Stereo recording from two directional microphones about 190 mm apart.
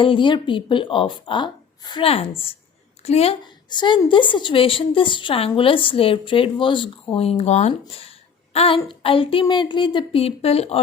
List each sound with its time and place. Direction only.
0.0 s a woman's voice: 25° left (ahead or behind)